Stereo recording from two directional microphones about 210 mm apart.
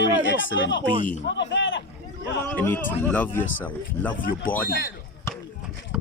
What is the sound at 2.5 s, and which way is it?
Speech, 10° left (ahead or behind).